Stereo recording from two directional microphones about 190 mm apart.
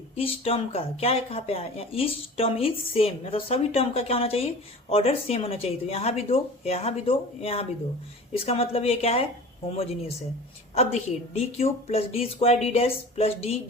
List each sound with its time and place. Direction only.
0.2 s speech: 30° left (ahead or behind)